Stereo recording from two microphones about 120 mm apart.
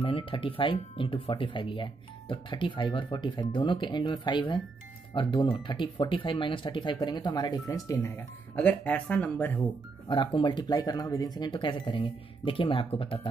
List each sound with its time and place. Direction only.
0.0 s speech: 45° left (ahead or behind); by 7.9 s 30° left (ahead or behind)
8.5 s speech: 10° left (ahead or behind)
10.0 s speech: 40° left (ahead or behind)